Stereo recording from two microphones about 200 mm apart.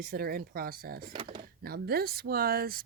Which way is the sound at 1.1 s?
25° right (ahead or behind).